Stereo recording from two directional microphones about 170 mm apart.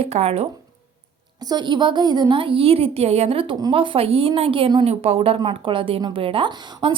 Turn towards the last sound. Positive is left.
turn(degrees=-30)  # may be behind; listen again after turning